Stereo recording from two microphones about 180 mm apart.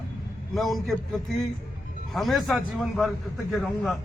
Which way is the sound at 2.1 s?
Centre (ahead or behind).